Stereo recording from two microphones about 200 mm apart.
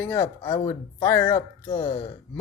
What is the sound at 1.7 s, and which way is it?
Speech, 30° left (ahead or behind).